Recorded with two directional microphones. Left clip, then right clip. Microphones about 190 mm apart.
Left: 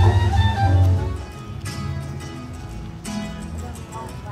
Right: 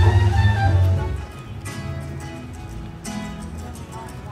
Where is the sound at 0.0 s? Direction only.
55° left (ahead or behind).